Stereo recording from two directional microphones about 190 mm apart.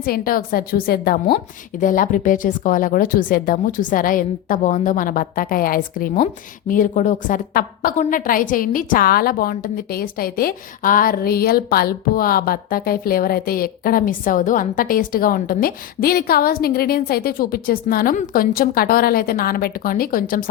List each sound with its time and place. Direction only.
0.0 s a woman's voice: 50° left (ahead or behind)